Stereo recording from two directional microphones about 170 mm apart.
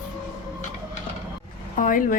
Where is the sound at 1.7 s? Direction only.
55° left (ahead or behind).